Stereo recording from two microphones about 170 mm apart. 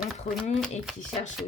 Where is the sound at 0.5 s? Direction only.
Centre (ahead or behind).